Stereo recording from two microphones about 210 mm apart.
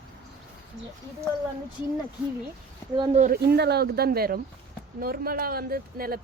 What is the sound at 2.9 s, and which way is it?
Speech, 20° right (ahead or behind).